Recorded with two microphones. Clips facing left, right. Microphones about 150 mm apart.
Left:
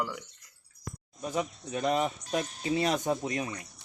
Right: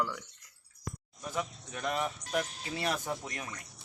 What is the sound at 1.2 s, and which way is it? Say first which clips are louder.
Speech: left 5 dB; 20° left (ahead or behind).